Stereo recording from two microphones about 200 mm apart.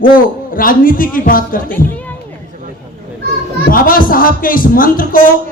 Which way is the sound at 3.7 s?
45° left (ahead or behind).